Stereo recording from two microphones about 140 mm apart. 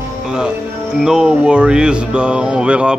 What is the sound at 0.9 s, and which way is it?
Speech, 5° right (ahead or behind).